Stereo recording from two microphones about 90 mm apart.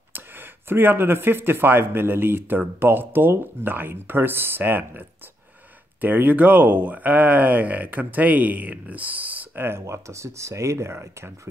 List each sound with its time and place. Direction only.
0.1 s speech: 25° right (ahead or behind)